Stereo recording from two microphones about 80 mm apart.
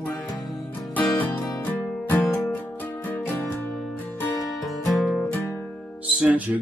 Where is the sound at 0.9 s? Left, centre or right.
Left.